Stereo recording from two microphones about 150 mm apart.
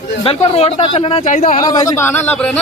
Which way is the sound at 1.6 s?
25° left (ahead or behind).